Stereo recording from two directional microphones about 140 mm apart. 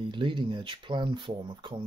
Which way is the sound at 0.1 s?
35° right (ahead or behind).